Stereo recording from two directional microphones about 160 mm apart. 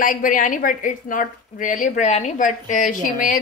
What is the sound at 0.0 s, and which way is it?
A woman's voice, 55° left (ahead or behind).